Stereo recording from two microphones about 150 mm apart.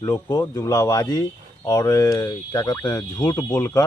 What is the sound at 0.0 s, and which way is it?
Speech, 20° left (ahead or behind).